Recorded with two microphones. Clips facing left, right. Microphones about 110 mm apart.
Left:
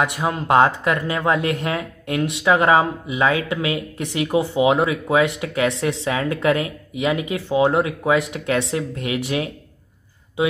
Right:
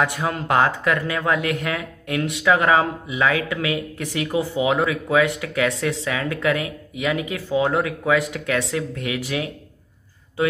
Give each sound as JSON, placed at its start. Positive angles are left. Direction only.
{"t": 0.0, "sound": "speech", "side_deg": 20}